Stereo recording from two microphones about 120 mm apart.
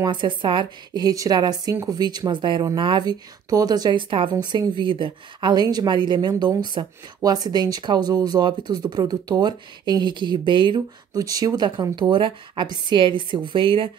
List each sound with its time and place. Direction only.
0.0 s speech: 40° right (ahead or behind)
11.1 s speech: 30° right (ahead or behind); by 13.8 s 45° right (ahead or behind)